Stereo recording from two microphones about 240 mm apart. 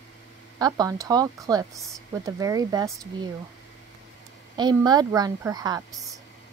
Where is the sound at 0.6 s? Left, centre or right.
Centre.